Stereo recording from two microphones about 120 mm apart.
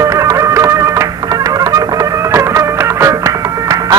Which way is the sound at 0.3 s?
25° right (ahead or behind).